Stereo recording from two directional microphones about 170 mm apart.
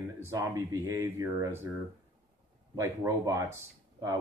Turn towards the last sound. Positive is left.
turn(degrees=-20)  # may be behind; listen again after turning